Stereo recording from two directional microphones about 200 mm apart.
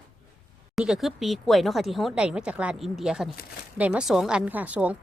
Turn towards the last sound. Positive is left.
turn(degrees=-5)  # may be behind; listen again after turning